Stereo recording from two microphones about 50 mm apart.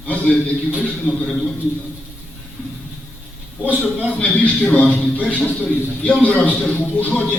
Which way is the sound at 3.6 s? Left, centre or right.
Right.